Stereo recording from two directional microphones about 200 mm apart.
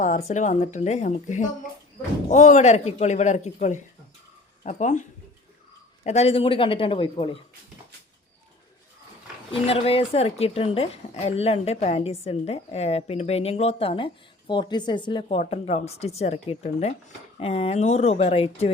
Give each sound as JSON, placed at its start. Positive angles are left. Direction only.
{"t": 0.3, "sound": "speech", "side_deg": 35}
{"t": 6.1, "sound": "a man's voice", "side_deg": 30}
{"t": 9.5, "sound": "speech", "side_deg": 30}